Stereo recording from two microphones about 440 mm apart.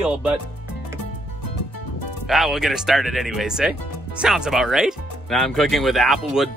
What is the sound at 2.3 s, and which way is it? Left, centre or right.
Speech, centre.